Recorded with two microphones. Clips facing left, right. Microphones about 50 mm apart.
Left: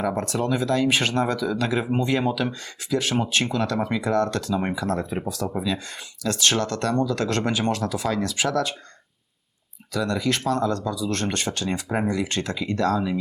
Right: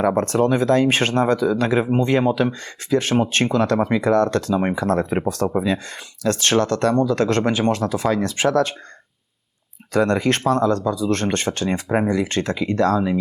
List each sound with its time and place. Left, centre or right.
0.0 s speech: right
9.9 s speech: right